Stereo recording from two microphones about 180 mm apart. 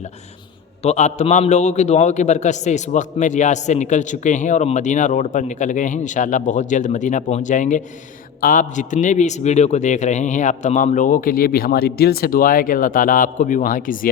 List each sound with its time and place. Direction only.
0.8 s a man's voice: 40° left (ahead or behind)